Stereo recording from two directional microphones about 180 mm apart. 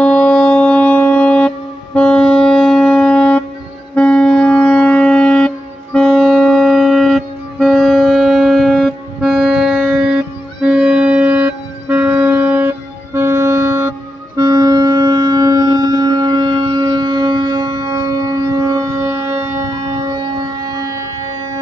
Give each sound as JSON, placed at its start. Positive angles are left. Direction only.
{"t": 0.0, "sound": "music", "side_deg": 5}